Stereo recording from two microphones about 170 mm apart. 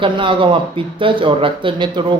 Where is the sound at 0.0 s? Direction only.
30° right (ahead or behind).